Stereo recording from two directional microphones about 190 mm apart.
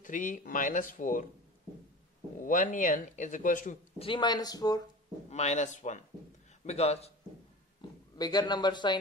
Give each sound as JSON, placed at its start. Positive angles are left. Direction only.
{"t": 0.0, "sound": "speech", "side_deg": 45}
{"t": 2.4, "sound": "speech", "side_deg": 40}
{"t": 4.0, "sound": "speech", "side_deg": 25}
{"t": 5.3, "sound": "a man's voice", "side_deg": 35}
{"t": 8.2, "sound": "speech", "side_deg": 20}